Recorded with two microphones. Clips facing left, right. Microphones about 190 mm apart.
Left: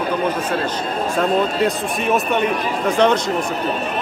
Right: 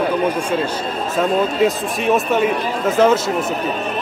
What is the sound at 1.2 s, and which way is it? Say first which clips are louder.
A man's voice: right 2 dB; centre (ahead or behind).